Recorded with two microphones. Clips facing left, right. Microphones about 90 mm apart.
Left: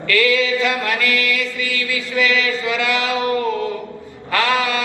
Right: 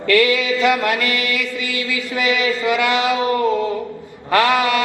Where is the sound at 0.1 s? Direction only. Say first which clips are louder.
Right 1 dB; 20° right (ahead or behind).